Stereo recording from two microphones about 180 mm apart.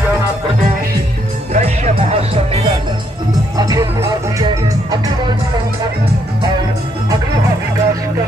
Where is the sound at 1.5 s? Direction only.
40° right (ahead or behind).